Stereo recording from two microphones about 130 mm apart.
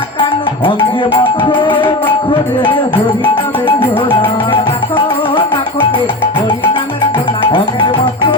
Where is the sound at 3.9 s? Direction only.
35° left (ahead or behind).